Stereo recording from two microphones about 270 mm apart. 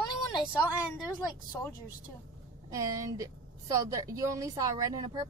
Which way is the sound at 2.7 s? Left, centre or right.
Centre.